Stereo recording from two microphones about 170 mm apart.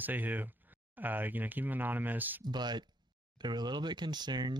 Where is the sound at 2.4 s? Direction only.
25° right (ahead or behind).